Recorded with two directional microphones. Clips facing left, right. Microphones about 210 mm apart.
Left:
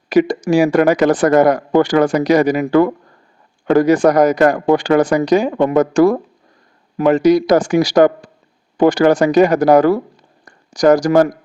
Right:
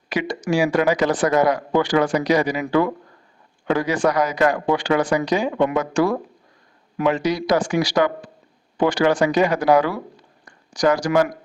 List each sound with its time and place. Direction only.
0.1 s speech: 40° left (ahead or behind)